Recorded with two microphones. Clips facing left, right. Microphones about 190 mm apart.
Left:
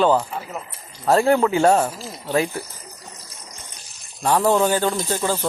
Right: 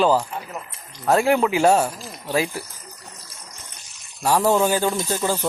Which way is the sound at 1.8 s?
10° left (ahead or behind).